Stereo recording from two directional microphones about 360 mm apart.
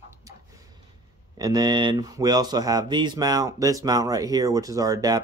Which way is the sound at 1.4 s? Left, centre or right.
Centre.